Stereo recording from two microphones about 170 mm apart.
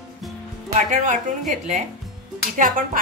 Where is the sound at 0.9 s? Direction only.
50° right (ahead or behind).